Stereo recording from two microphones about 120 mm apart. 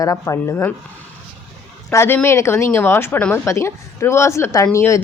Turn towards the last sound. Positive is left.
turn(degrees=25)  # may be behind; listen again after turning